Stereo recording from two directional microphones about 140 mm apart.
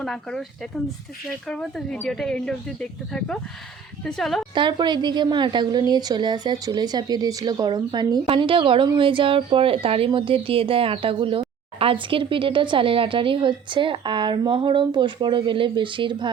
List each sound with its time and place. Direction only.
0.0 s speech: 5° left (ahead or behind)
4.5 s a woman's voice: 35° right (ahead or behind)